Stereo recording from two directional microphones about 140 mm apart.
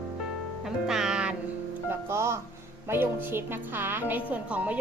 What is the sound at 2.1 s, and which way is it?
A woman's voice, 20° right (ahead or behind).